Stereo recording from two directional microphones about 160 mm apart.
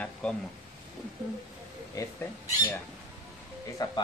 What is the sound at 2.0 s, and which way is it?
Speech, 20° left (ahead or behind).